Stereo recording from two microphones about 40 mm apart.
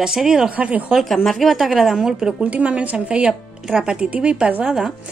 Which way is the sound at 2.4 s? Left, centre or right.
Right.